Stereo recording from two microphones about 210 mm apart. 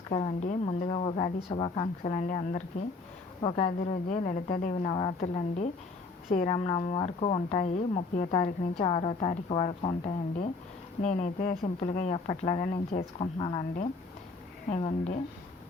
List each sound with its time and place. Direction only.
0.1 s speech: 30° left (ahead or behind)
2.1 s speech: 35° left (ahead or behind)
6.5 s speech: 25° left (ahead or behind)
14.7 s speech: 30° left (ahead or behind)